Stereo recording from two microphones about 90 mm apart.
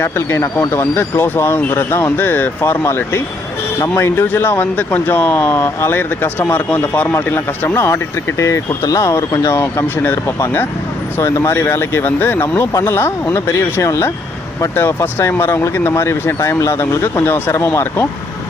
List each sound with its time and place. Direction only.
0.0 s speech: 30° left (ahead or behind)